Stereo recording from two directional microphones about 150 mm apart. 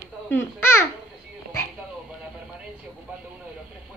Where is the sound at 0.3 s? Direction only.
15° left (ahead or behind).